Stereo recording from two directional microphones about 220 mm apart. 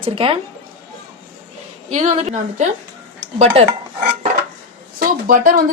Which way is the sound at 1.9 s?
30° right (ahead or behind).